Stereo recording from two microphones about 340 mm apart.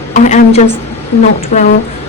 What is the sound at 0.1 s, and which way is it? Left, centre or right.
A woman's voice, left.